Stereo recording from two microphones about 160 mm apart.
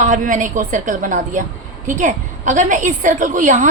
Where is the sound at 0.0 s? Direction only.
50° right (ahead or behind).